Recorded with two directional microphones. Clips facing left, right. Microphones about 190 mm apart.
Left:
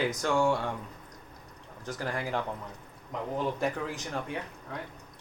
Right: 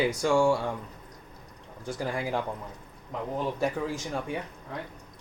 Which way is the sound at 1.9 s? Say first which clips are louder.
Right 3 dB; 10° right (ahead or behind).